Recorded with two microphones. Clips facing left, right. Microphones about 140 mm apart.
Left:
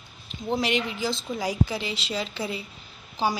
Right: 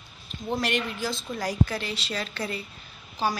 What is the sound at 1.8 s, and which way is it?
Speech, 90° left.